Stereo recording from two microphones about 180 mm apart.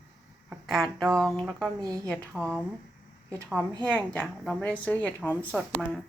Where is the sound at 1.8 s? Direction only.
20° right (ahead or behind).